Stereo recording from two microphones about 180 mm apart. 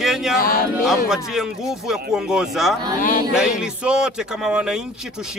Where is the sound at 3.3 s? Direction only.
5° right (ahead or behind).